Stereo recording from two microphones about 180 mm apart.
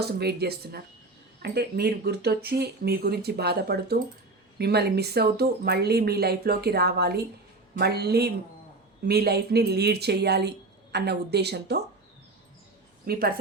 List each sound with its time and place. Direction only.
0.0 s a woman's voice: 65° right (ahead or behind)
13.1 s speech: 60° right (ahead or behind)